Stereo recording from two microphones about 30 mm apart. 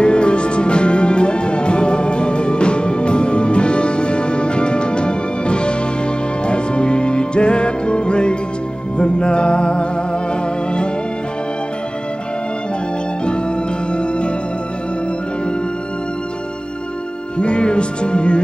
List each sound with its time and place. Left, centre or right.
0.0 s music: left
17.4 s music: left